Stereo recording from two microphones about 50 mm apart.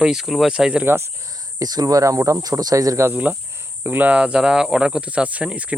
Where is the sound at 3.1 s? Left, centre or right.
Right.